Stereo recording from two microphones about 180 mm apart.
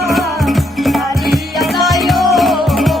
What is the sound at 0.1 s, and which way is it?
Music, centre (ahead or behind).